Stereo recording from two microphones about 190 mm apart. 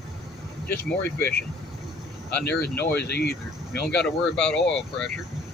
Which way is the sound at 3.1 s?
60° left (ahead or behind).